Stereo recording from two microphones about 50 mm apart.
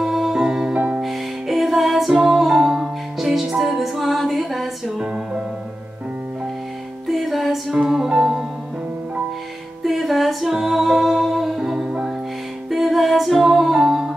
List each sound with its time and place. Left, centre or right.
0.0 s music: centre
0.5 s music: centre
0.7 s music: right
1.0 s music: centre
4.9 s music: centre
7.1 s music: centre
7.7 s music: centre
9.8 s music: centre